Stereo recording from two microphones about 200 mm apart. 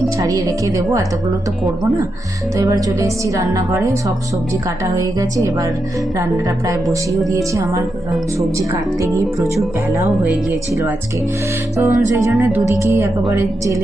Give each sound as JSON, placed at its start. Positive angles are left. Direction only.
{"t": 0.2, "sound": "speech", "side_deg": -15}
{"t": 2.6, "sound": "speech", "side_deg": -15}
{"t": 7.3, "sound": "speech", "side_deg": -15}
{"t": 11.8, "sound": "speech", "side_deg": -10}